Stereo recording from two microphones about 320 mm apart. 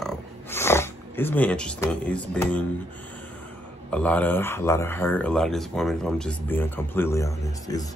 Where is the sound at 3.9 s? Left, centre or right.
Centre.